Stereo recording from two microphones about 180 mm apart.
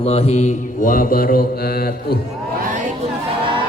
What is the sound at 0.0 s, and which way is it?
Mantra, 35° left (ahead or behind).